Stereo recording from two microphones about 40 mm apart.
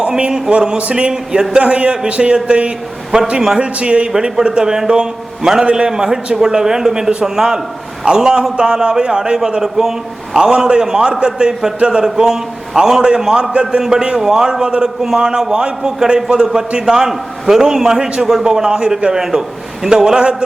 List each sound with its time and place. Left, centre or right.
0.2 s a man's voice: centre
1.5 s a man's voice: right
17.1 s a man's voice: centre